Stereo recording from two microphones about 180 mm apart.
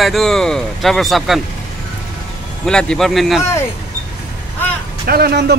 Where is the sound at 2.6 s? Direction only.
5° left (ahead or behind).